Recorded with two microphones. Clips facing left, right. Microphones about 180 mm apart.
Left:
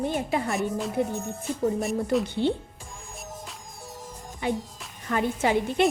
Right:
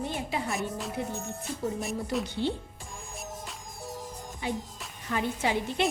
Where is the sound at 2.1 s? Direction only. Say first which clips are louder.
Left 7 dB; centre (ahead or behind).